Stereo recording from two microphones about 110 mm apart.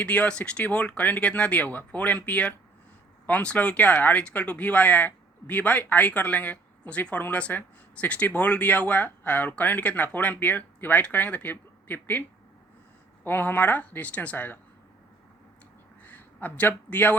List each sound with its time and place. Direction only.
0.0 s speech: 10° left (ahead or behind)
13.2 s speech: 15° left (ahead or behind)
16.0 s a man's voice: 15° left (ahead or behind)